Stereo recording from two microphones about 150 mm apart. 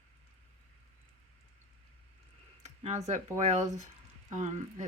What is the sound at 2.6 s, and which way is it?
Speech, 50° right (ahead or behind).